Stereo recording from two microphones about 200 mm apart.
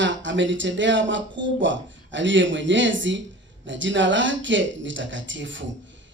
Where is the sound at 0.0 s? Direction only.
65° right (ahead or behind).